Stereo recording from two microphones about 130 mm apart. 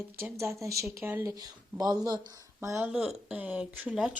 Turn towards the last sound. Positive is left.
turn(degrees=-5)  # may be behind; listen again after turning